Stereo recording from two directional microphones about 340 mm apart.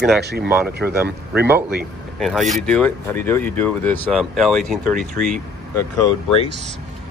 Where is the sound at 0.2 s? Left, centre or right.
Right.